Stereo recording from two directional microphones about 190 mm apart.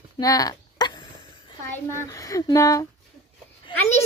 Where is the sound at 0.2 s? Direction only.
20° left (ahead or behind).